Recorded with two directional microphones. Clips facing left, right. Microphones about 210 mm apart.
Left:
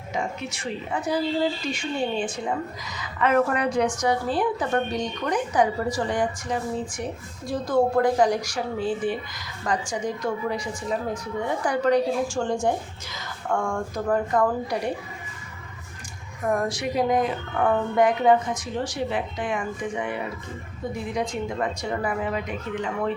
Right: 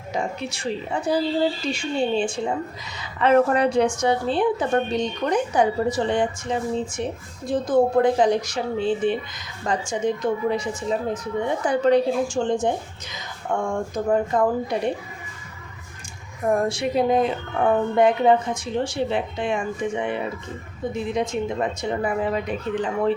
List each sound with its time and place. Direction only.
0.1 s a woman's voice: 35° right (ahead or behind)
16.5 s a woman's voice: 25° right (ahead or behind)